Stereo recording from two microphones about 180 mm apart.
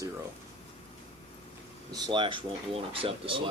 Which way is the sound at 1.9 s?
25° right (ahead or behind).